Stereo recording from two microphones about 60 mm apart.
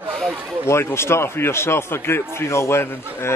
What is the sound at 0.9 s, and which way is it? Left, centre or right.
A man's voice, left.